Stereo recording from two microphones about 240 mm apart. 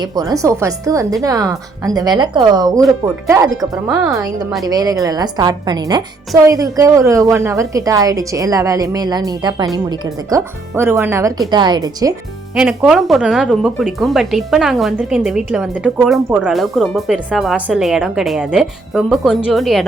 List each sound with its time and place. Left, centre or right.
0.0 s a woman's voice: centre
12.5 s a woman's voice: centre